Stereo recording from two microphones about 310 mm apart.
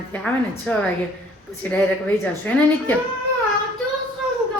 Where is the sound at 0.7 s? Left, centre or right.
Centre.